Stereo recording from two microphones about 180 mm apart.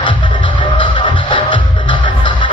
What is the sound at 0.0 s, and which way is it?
Music, 25° left (ahead or behind).